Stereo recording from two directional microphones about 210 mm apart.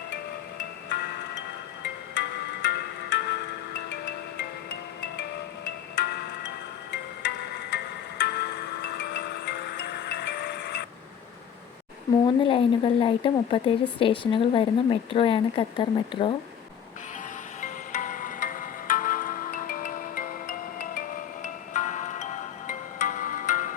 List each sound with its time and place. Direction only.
2.1 s music: 55° left (ahead or behind)
12.2 s speech: 25° left (ahead or behind)
17.6 s music: 40° left (ahead or behind)